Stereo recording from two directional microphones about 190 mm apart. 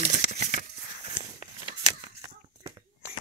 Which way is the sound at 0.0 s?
40° right (ahead or behind).